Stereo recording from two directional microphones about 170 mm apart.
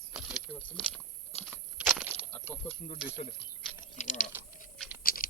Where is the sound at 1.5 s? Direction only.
5° right (ahead or behind).